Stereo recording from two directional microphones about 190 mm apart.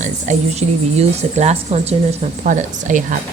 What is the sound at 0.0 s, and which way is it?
Speech, 35° right (ahead or behind).